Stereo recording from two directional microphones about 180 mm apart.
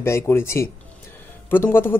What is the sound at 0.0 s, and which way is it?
Speech, 15° left (ahead or behind).